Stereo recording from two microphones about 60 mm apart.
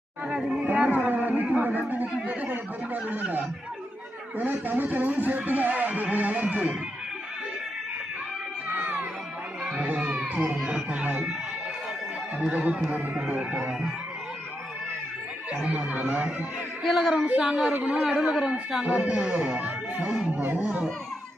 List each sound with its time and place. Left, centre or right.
0.7 s speech: right
8.7 s music: right
9.6 s children playing: centre
10.6 s music: centre
12.5 s speech: centre
15.6 s speech: right
16.8 s speech: centre
17.2 s speech: right
17.4 s speech: centre
18.3 s speech: centre
20.0 s speech: centre
20.6 s speech: right